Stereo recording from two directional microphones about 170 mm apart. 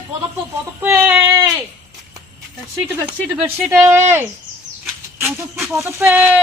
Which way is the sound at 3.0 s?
10° right (ahead or behind).